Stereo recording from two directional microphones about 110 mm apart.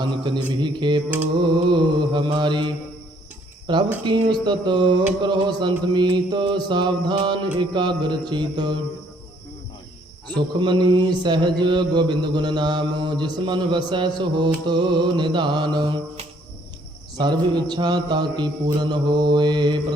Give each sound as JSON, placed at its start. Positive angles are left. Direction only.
{"t": 0.0, "sound": "mantra", "side_deg": -45}
{"t": 10.2, "sound": "mantra", "side_deg": -45}
{"t": 17.2, "sound": "mantra", "side_deg": -40}